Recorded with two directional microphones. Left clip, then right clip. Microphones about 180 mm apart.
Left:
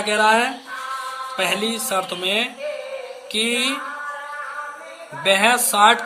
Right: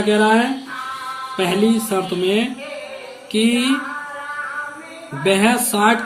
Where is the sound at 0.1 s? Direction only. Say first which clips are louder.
Right 1 dB; 45° left (ahead or behind).